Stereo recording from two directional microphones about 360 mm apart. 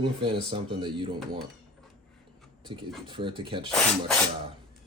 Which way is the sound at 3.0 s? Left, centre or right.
Centre.